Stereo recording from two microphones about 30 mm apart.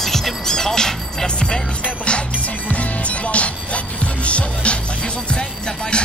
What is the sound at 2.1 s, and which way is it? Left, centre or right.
Music, left.